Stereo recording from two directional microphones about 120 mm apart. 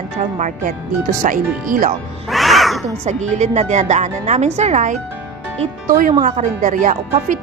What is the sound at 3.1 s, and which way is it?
A woman's voice, 75° right (ahead or behind).